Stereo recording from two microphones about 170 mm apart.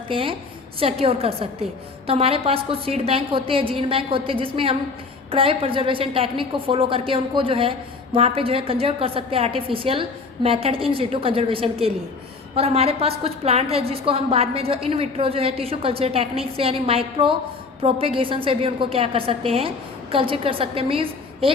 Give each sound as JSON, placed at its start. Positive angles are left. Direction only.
{"t": 0.1, "sound": "a woman's voice", "side_deg": -30}